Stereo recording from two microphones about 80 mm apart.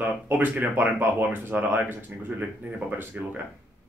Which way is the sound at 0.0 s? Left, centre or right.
Right.